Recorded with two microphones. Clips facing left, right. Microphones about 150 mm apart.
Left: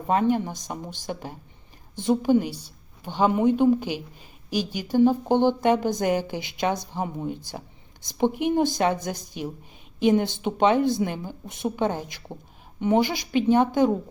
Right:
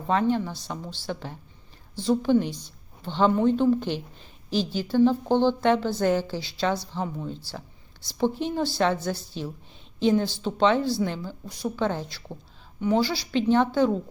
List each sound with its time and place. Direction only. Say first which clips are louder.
0.1 s a woman's voice: left 1 dB; 15° left (ahead or behind)